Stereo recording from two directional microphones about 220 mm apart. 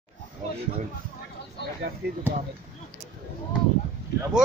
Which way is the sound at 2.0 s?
45° right (ahead or behind).